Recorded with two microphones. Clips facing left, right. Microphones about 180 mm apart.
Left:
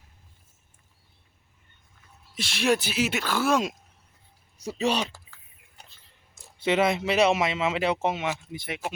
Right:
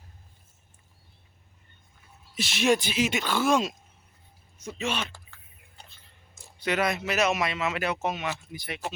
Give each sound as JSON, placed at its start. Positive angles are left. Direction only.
{"t": 2.3, "sound": "speech", "side_deg": -5}
{"t": 4.5, "sound": "speech", "side_deg": 35}
{"t": 5.1, "sound": "typing", "side_deg": 5}
{"t": 6.6, "sound": "speech", "side_deg": 25}